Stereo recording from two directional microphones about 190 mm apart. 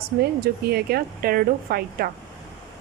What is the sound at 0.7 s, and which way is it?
Speech, 55° right (ahead or behind).